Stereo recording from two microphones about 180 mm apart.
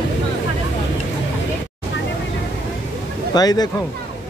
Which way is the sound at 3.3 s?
20° left (ahead or behind).